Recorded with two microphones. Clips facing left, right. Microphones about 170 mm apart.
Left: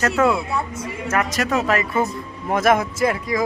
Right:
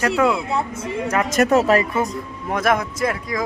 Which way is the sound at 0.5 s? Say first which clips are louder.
Right 3 dB; 25° right (ahead or behind).